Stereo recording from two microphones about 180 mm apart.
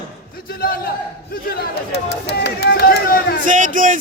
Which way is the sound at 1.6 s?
65° left (ahead or behind).